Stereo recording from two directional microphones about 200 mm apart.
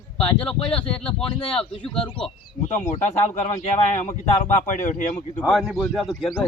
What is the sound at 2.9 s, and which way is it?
Speech, 30° left (ahead or behind).